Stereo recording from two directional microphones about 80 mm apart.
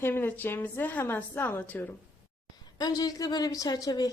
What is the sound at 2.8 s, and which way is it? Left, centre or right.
A woman's voice, left.